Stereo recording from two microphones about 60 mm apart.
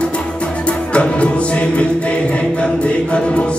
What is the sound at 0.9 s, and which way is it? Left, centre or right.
Music, centre.